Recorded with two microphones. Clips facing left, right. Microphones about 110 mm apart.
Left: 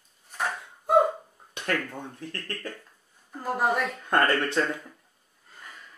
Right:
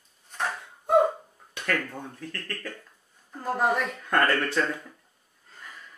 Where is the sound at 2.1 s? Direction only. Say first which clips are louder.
Even; 25° left (ahead or behind).